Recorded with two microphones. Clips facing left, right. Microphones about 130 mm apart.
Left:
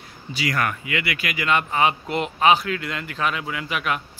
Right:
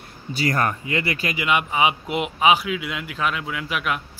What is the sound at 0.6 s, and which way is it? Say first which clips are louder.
Speech: right 2 dB; 30° right (ahead or behind).